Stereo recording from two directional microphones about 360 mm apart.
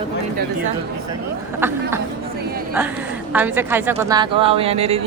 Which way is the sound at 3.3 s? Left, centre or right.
Centre.